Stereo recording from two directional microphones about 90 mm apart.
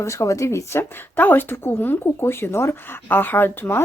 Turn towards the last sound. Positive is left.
turn(degrees=25)  # may be behind; listen again after turning